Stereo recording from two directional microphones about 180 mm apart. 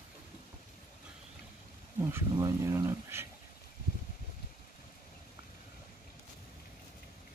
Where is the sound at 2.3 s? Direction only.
20° right (ahead or behind).